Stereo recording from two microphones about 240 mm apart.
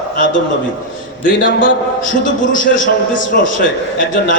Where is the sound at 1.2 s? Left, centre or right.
Left.